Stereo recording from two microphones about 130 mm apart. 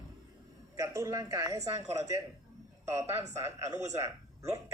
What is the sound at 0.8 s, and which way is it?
A man's voice, 25° right (ahead or behind).